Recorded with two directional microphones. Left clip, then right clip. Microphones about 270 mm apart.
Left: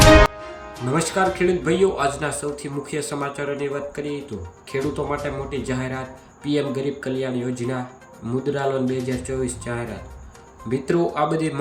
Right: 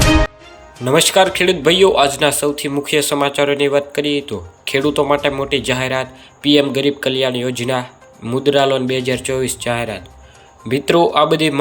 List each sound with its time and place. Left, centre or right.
0.9 s a man's voice: centre